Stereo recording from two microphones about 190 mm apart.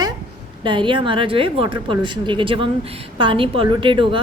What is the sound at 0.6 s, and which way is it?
A woman's voice, 25° right (ahead or behind).